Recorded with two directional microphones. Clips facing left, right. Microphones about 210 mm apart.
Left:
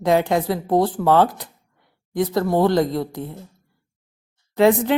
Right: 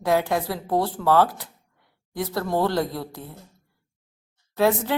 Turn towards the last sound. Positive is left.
turn(degrees=15)  # may be behind; listen again after turning